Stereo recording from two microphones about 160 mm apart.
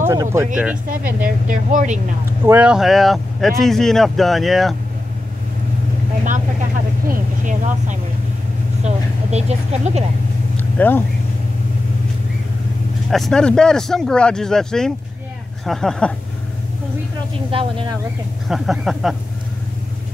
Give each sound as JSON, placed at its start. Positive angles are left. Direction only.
{"t": 0.0, "sound": "speech", "side_deg": -15}
{"t": 1.2, "sound": "speech", "side_deg": -55}
{"t": 2.4, "sound": "speech", "side_deg": -10}
{"t": 7.1, "sound": "speech", "side_deg": -55}
{"t": 10.6, "sound": "vehicle", "side_deg": 10}
{"t": 13.1, "sound": "speech", "side_deg": 5}
{"t": 17.5, "sound": "a woman's voice", "side_deg": -35}
{"t": 18.5, "sound": "speech", "side_deg": 0}